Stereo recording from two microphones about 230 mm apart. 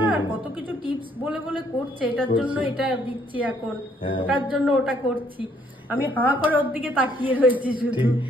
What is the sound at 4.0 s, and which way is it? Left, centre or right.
Speech, left.